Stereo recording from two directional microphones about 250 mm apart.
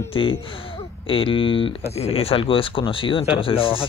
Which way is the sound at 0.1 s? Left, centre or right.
Left.